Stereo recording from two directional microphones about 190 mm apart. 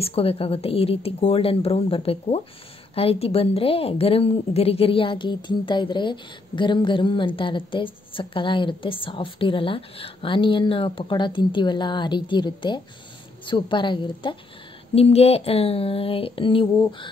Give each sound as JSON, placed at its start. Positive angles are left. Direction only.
{"t": 0.0, "sound": "a woman's voice", "side_deg": 30}